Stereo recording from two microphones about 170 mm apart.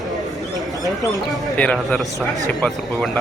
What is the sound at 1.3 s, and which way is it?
A man's voice, 5° left (ahead or behind).